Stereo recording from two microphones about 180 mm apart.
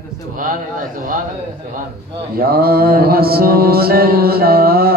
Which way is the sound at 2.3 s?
55° right (ahead or behind).